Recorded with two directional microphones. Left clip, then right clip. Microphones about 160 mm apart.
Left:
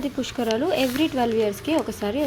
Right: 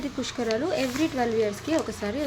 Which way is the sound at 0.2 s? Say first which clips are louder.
Left 2 dB; 15° left (ahead or behind).